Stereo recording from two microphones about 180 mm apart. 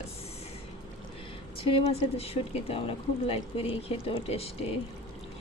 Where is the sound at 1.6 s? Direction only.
30° left (ahead or behind).